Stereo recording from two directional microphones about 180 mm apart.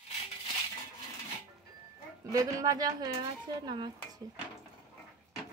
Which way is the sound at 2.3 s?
20° right (ahead or behind).